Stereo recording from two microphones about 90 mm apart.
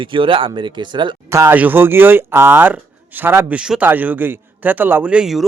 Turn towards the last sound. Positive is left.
turn(degrees=-5)  # may be behind; listen again after turning